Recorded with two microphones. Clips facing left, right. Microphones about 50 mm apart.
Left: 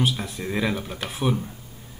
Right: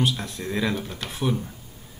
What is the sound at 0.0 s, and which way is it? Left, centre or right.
Speech, centre.